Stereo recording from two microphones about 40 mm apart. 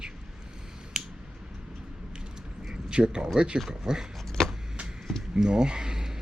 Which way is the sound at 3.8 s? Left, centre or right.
Centre.